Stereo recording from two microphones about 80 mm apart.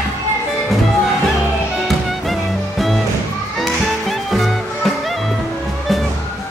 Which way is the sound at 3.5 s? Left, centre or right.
Centre.